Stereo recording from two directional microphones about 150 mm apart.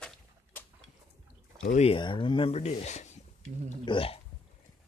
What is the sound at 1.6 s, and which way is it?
Speech, 50° left (ahead or behind).